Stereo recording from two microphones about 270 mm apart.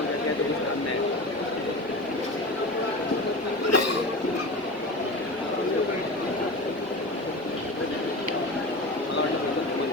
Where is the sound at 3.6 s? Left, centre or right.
Left.